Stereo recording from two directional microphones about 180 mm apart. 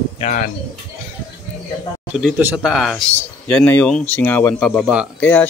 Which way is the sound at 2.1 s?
5° right (ahead or behind).